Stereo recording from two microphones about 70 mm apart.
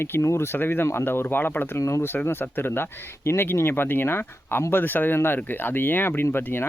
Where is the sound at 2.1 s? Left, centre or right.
Left.